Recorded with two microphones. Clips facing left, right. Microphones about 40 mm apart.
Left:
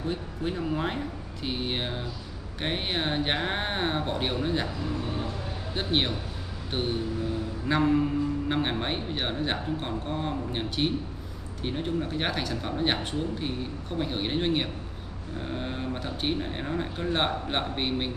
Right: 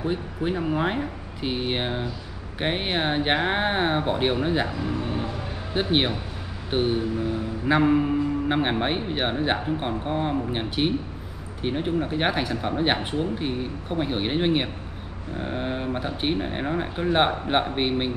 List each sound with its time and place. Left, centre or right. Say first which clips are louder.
0.0 s music: right 4 dB; centre